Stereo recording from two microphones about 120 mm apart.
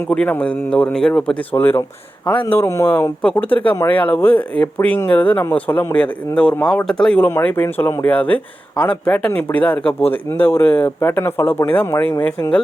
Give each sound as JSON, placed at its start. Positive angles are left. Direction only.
{"t": 0.1, "sound": "speech", "side_deg": 10}
{"t": 3.2, "sound": "speech", "side_deg": 10}
{"t": 7.3, "sound": "speech", "side_deg": 20}